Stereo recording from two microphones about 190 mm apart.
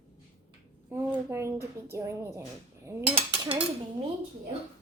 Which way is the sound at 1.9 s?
15° right (ahead or behind).